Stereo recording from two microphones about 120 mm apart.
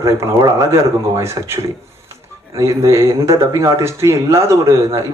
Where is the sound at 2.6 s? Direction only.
25° right (ahead or behind).